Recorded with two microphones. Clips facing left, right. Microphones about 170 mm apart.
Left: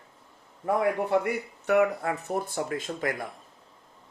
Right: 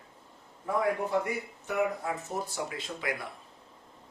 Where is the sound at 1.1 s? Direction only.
65° left (ahead or behind); by 3.3 s 45° left (ahead or behind).